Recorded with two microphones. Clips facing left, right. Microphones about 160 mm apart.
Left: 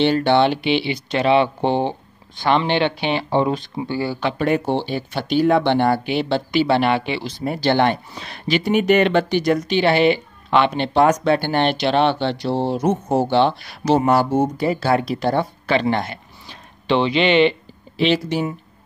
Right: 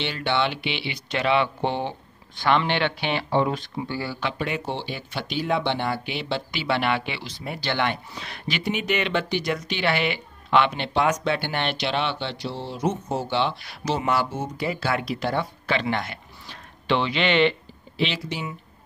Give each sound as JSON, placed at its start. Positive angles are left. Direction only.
{"t": 0.0, "sound": "speech", "side_deg": 40}
{"t": 4.2, "sound": "speech", "side_deg": 45}
{"t": 16.4, "sound": "speech", "side_deg": 25}
{"t": 17.9, "sound": "speech", "side_deg": 45}